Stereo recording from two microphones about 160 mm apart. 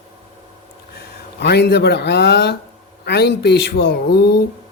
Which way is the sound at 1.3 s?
90° left.